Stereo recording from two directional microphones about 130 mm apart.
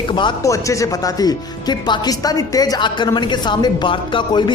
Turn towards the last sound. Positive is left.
turn(degrees=35)  # may be behind; listen again after turning